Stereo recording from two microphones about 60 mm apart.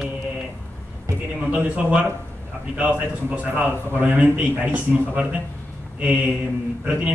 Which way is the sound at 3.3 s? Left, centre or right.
Right.